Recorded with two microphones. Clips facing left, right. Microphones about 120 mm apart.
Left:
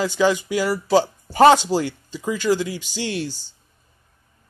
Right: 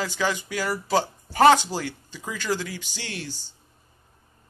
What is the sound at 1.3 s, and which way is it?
Speech, 20° left (ahead or behind).